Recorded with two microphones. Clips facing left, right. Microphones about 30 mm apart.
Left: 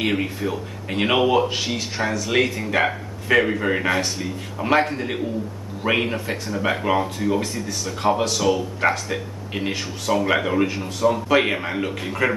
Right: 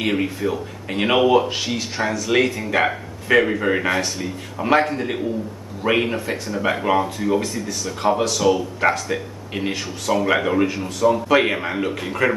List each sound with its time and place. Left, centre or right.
0.0 s speech: centre